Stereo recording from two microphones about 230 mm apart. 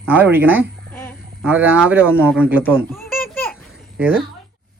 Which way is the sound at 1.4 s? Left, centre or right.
Centre.